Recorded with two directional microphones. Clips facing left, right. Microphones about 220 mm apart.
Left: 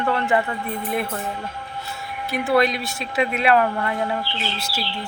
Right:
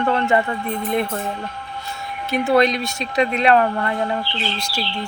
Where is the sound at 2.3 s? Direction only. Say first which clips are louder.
Right 3 dB; 20° right (ahead or behind).